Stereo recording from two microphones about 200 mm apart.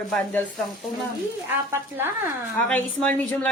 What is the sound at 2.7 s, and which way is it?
Speech, 5° left (ahead or behind).